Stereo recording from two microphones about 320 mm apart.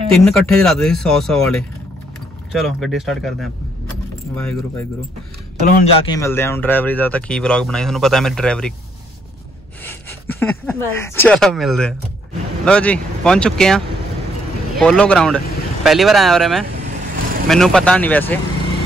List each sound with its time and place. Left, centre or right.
0.1 s speech: centre
5.7 s speech: left
6.0 s speech: centre
9.8 s speech: centre